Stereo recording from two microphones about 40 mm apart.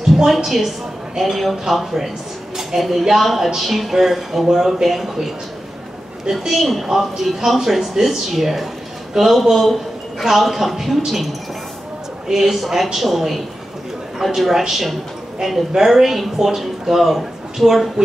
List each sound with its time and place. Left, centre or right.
0.1 s a woman's voice: centre
6.6 s a man's voice: centre
12.3 s a man's voice: centre